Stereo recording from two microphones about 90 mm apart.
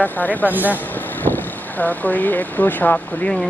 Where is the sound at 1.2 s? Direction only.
20° left (ahead or behind).